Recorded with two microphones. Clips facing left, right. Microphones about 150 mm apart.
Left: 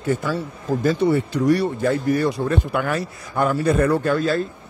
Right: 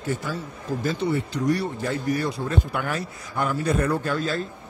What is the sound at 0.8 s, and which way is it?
Speech, 55° left (ahead or behind).